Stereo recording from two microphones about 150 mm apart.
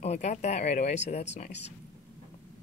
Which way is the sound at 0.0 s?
50° left (ahead or behind).